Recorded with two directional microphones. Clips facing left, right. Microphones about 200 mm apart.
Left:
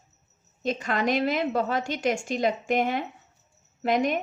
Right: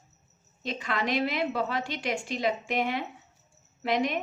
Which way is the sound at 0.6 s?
45° left (ahead or behind).